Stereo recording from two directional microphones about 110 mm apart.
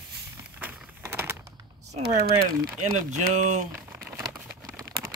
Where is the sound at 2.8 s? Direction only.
90° right.